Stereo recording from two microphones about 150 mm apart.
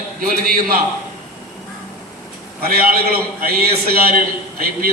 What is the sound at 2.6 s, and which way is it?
A man's voice, 80° right.